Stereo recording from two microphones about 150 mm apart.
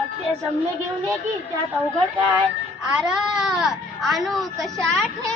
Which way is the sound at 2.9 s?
5° right (ahead or behind).